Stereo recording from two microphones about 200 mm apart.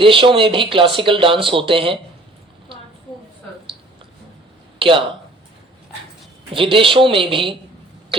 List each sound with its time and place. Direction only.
0.0 s speech: 25° right (ahead or behind)
4.8 s speech: 25° right (ahead or behind)
6.5 s speech: 25° right (ahead or behind)